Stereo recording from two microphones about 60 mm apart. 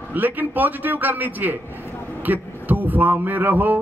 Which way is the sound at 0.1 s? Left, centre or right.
Right.